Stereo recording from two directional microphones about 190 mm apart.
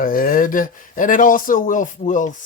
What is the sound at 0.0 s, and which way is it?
Speech, 50° left (ahead or behind).